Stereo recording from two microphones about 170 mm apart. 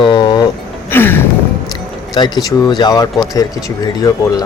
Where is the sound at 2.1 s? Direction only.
25° left (ahead or behind).